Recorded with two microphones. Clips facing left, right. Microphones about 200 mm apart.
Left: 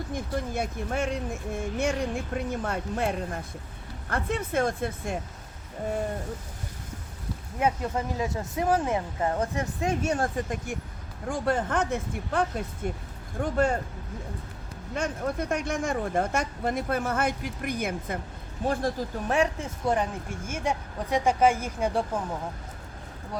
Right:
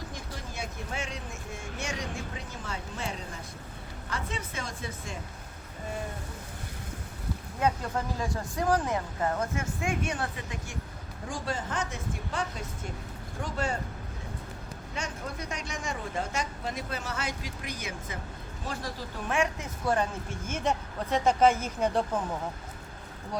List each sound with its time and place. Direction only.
0.1 s speech: 55° left (ahead or behind)
7.6 s speech: 20° left (ahead or behind); by 10.8 s 50° left (ahead or behind)
11.3 s speech: 60° left (ahead or behind)
14.9 s speech: 55° left (ahead or behind)
19.3 s speech: 35° left (ahead or behind)
19.8 s speech: 20° left (ahead or behind)
20.5 s speech: 10° left (ahead or behind)